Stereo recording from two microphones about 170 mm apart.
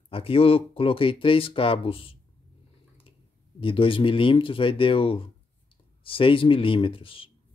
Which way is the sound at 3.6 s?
30° left (ahead or behind).